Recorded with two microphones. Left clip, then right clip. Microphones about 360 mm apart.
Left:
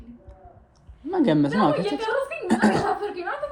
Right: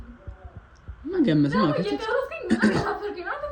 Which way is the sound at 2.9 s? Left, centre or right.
Left.